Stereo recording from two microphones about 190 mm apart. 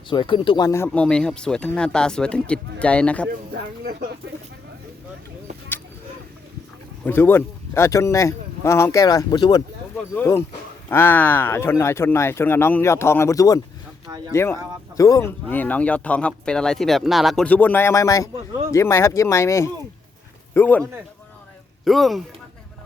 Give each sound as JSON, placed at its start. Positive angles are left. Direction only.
{"t": 0.1, "sound": "speech", "side_deg": 25}
{"t": 0.9, "sound": "speech", "side_deg": 5}
{"t": 3.2, "sound": "speech", "side_deg": -55}
{"t": 7.0, "sound": "speech", "side_deg": 10}
{"t": 21.8, "sound": "speech", "side_deg": 0}